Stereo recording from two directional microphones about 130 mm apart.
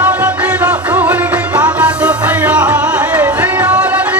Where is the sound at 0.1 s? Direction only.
10° right (ahead or behind).